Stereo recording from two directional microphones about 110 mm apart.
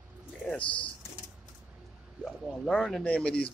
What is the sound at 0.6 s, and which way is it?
Speech, 50° left (ahead or behind).